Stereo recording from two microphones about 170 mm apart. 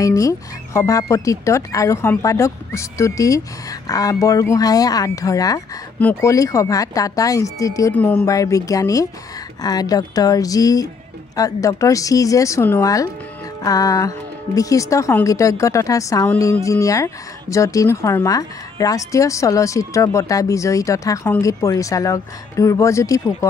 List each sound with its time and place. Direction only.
0.0 s a woman's voice: 20° left (ahead or behind)
8.3 s a woman's voice: 20° left (ahead or behind)